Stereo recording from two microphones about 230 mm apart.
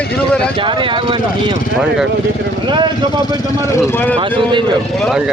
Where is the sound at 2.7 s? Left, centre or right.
Centre.